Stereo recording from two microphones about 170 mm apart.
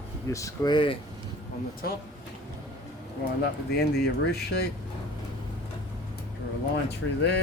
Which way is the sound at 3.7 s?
70° left (ahead or behind).